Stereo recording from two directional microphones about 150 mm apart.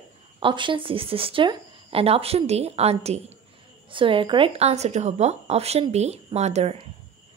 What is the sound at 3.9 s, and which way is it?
A woman's voice, 35° right (ahead or behind).